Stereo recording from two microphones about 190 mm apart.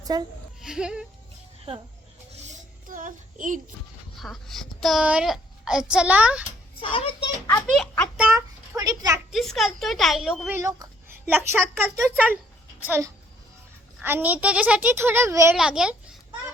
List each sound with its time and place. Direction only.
0.1 s a woman's voice: 20° right (ahead or behind)
0.6 s speech: 5° right (ahead or behind)
1.7 s speech: 30° right (ahead or behind)
2.8 s a sound: 45° right (ahead or behind)
4.2 s a child's voice: centre (ahead or behind)
6.8 s a child's voice: 25° left (ahead or behind)
7.8 s a child's voice: 5° left (ahead or behind)
8.2 s a sound: 15° right (ahead or behind)
9.3 s a child's voice: centre (ahead or behind)
10.6 s a woman's voice: 15° right (ahead or behind)
15.5 s a child's voice: 5° right (ahead or behind)